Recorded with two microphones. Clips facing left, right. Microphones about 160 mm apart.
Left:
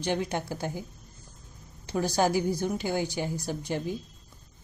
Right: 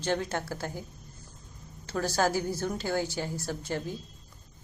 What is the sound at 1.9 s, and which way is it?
A woman's voice, 15° left (ahead or behind).